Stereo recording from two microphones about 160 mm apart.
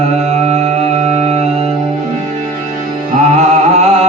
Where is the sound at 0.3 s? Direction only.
40° right (ahead or behind).